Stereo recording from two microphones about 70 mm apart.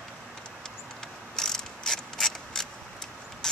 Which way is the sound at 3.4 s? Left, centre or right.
Centre.